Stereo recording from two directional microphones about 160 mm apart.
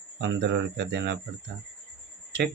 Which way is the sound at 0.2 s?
90° right.